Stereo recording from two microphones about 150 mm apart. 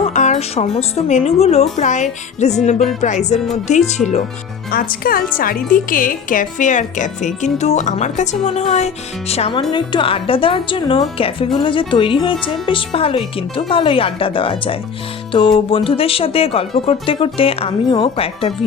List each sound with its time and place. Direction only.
0.0 s a woman's voice: 50° left (ahead or behind)
4.7 s a woman's voice: 85° left; by 9.6 s 45° left (ahead or behind)
9.6 s a woman's voice: 30° left (ahead or behind)